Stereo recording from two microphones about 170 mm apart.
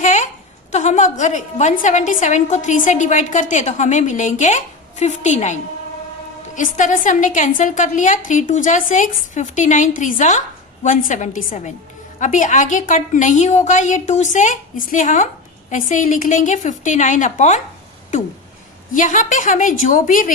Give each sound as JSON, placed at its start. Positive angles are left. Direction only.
{"t": 0.0, "sound": "a sound", "side_deg": 45}
{"t": 0.7, "sound": "a woman's voice", "side_deg": 45}
{"t": 6.6, "sound": "a woman's voice", "side_deg": 50}
{"t": 18.9, "sound": "a woman's voice", "side_deg": 50}